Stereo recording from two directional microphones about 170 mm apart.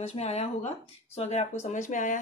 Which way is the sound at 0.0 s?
40° left (ahead or behind).